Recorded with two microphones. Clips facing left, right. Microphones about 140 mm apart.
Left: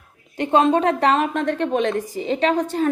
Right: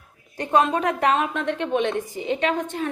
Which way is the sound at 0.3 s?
30° left (ahead or behind).